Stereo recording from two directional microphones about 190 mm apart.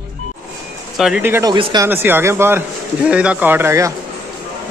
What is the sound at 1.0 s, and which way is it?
Speech, 5° right (ahead or behind).